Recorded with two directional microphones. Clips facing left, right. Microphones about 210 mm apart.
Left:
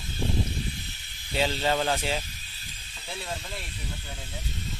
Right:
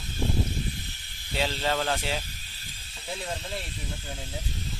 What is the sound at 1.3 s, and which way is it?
Speech, centre (ahead or behind).